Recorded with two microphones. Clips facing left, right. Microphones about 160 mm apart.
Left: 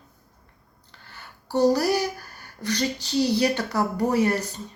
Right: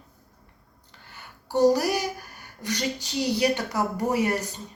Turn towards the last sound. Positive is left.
turn(degrees=-15)  # may be behind; listen again after turning